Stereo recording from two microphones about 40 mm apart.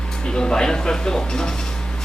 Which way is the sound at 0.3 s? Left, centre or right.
Centre.